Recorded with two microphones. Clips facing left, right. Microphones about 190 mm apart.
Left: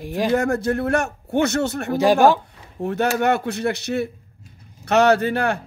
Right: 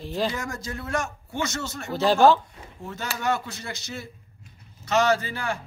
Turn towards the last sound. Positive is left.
turn(degrees=65)  # may be behind; listen again after turning